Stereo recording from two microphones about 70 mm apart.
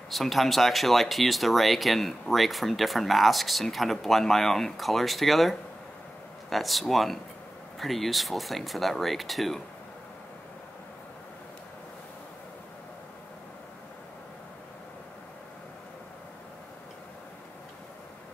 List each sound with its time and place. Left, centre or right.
0.1 s speech: centre